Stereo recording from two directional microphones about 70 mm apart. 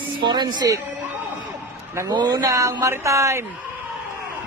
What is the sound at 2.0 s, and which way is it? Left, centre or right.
Speech, right.